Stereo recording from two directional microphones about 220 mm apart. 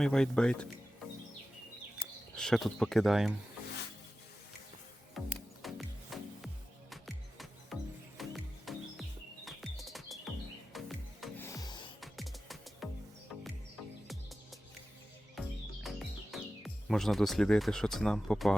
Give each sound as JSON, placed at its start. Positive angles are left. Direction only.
{"t": 0.0, "sound": "speech", "side_deg": 5}
{"t": 2.3, "sound": "speech", "side_deg": 5}
{"t": 5.2, "sound": "music", "side_deg": 0}
{"t": 11.4, "sound": "music", "side_deg": 15}
{"t": 11.9, "sound": "music", "side_deg": 0}
{"t": 15.4, "sound": "music", "side_deg": 0}